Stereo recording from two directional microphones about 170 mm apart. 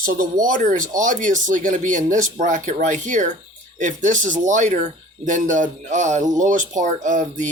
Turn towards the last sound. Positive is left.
turn(degrees=-45)  # may be behind; listen again after turning